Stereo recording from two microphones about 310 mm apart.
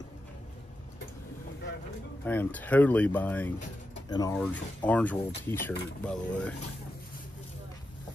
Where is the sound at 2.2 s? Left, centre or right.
Centre.